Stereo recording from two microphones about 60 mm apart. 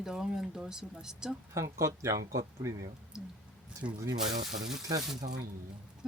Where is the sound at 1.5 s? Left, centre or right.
Right.